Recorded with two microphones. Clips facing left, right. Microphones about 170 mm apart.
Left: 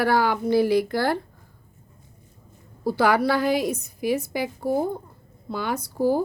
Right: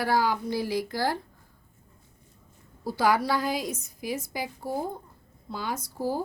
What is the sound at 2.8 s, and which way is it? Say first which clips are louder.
A woman's voice: left 4 dB; 65° left (ahead or behind).